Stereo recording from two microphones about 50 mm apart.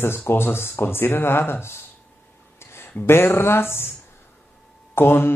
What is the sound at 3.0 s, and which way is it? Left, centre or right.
Speech, left.